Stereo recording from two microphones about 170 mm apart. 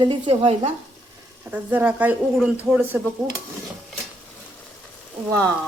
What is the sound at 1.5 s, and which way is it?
Speech, 10° right (ahead or behind).